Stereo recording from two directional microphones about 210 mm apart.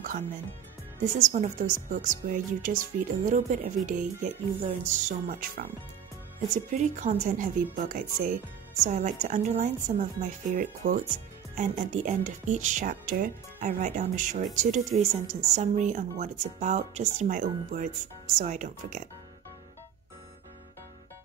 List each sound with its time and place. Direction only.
1.2 s a woman's voice: 35° right (ahead or behind)